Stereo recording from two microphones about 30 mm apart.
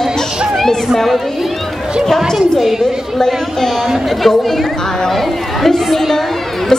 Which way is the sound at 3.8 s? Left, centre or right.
Centre.